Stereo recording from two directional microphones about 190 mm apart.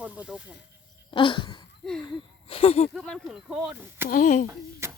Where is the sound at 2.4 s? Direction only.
30° left (ahead or behind).